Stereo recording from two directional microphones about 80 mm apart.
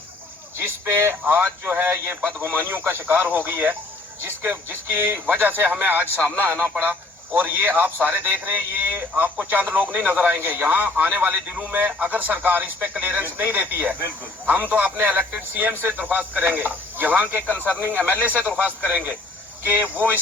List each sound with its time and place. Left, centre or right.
0.6 s a man's voice: right
17.4 s speech: centre
17.7 s a man's voice: right